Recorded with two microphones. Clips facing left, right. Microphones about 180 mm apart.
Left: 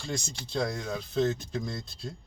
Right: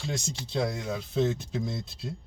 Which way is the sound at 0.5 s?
5° right (ahead or behind).